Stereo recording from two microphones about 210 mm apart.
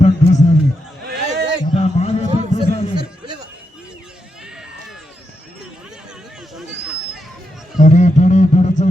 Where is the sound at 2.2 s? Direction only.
35° right (ahead or behind).